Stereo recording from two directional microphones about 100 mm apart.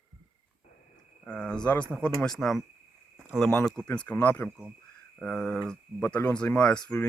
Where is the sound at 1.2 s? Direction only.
10° left (ahead or behind).